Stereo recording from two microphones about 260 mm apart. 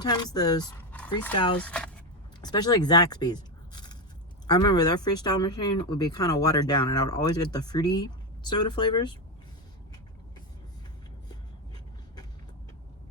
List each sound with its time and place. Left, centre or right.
0.0 s speech: centre
1.5 s speech: centre
2.4 s speech: centre